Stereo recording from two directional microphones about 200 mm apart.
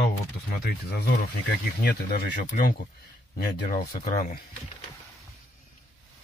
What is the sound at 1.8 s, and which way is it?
Speech, 50° left (ahead or behind).